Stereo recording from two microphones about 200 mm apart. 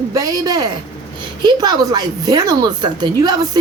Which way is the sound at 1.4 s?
20° right (ahead or behind).